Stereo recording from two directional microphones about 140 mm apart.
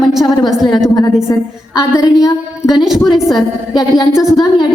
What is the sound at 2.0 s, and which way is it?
Speech, 25° left (ahead or behind).